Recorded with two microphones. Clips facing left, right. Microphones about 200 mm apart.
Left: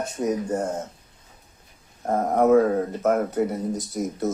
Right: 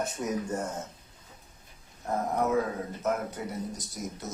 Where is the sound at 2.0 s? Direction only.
55° left (ahead or behind).